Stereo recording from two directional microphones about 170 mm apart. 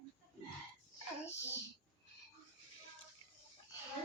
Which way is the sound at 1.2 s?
15° left (ahead or behind).